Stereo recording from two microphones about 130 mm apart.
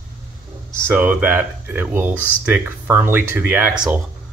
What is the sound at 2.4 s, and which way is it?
Speech, 10° right (ahead or behind).